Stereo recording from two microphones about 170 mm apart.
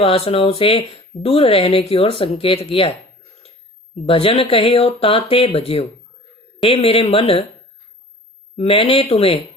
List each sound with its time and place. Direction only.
0.0 s speech: 35° left (ahead or behind)
4.1 s speech: 35° left (ahead or behind)
8.5 s speech: 30° left (ahead or behind)